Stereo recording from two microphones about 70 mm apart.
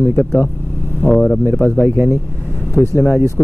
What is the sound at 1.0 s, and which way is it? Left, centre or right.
Speech, left.